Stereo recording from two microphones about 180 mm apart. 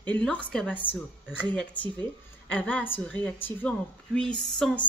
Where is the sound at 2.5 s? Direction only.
10° left (ahead or behind).